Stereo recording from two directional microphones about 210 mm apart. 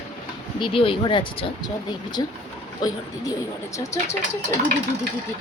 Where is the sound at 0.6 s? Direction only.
25° left (ahead or behind).